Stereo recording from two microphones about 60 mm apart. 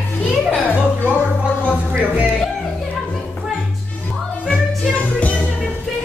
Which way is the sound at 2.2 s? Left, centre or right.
Centre.